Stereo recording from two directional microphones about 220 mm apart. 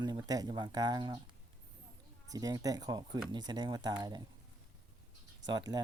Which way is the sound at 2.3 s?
15° right (ahead or behind).